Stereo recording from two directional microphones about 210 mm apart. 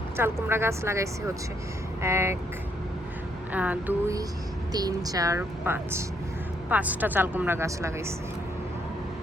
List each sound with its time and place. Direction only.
0.2 s a woman's voice: 10° right (ahead or behind)
3.5 s a woman's voice: 5° right (ahead or behind)